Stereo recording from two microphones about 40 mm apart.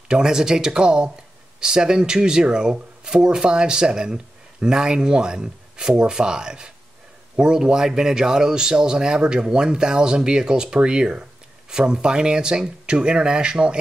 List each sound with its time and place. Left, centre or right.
0.1 s a man's voice: centre